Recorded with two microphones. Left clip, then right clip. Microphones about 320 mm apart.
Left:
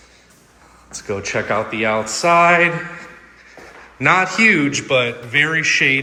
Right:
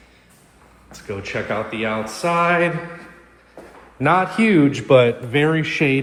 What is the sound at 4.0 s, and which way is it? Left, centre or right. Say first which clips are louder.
A man's voice: left 4 dB; centre.